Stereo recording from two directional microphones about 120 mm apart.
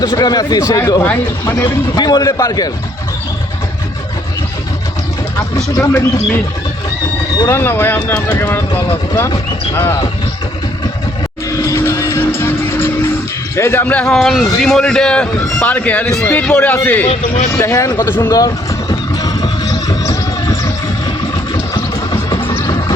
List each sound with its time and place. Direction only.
0.0 s a man's voice: 35° left (ahead or behind)
1.0 s speech: 20° left (ahead or behind)
2.0 s a man's voice: 35° left (ahead or behind)
5.5 s a man's voice: 25° left (ahead or behind)
11.6 s vehicle: 25° left (ahead or behind)
13.6 s a man's voice: 20° left (ahead or behind)
17.1 s a man's voice: 70° left (ahead or behind)
17.6 s vehicle: 25° left (ahead or behind)